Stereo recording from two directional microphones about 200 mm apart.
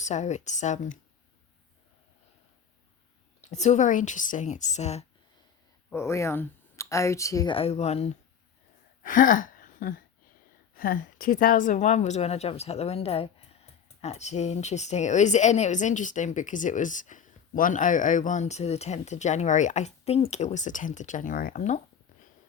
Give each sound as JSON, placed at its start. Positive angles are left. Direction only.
{"t": 0.0, "sound": "a woman's voice", "side_deg": 35}
{"t": 3.5, "sound": "a woman's voice", "side_deg": 35}
{"t": 5.9, "sound": "speech", "side_deg": 15}
{"t": 9.0, "sound": "a sound", "side_deg": 40}
{"t": 10.8, "sound": "a woman's voice", "side_deg": 45}